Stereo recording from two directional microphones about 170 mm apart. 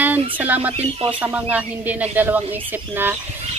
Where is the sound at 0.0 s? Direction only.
10° right (ahead or behind).